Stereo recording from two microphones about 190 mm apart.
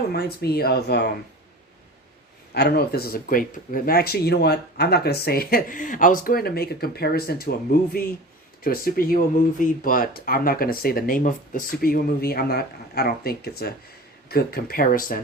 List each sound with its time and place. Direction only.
0.1 s speech: 55° left (ahead or behind)
2.5 s speech: 55° left (ahead or behind)